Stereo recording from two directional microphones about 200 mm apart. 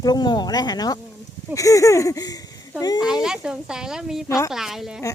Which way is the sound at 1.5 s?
15° left (ahead or behind).